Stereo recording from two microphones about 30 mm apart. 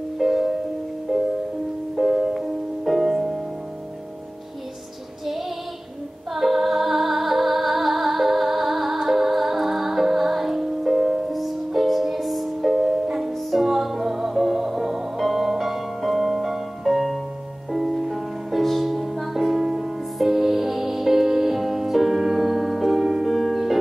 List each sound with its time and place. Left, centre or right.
0.2 s music: centre
6.3 s music: centre
13.0 s music: centre
13.3 s music: centre
19.3 s music: centre
20.2 s music: centre